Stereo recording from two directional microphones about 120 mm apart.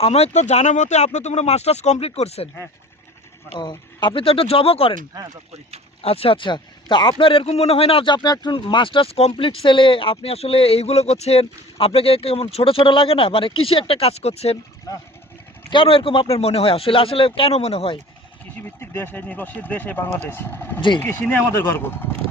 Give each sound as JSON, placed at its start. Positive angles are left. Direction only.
{"t": 0.0, "sound": "speech", "side_deg": 60}
{"t": 3.6, "sound": "speech", "side_deg": 40}
{"t": 6.0, "sound": "speech", "side_deg": 55}
{"t": 15.7, "sound": "speech", "side_deg": 45}
{"t": 18.6, "sound": "speech", "side_deg": 20}